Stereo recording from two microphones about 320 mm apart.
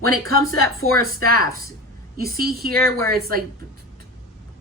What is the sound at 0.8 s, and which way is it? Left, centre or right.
Speech, right.